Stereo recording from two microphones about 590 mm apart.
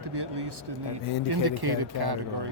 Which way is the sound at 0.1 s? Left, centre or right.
Right.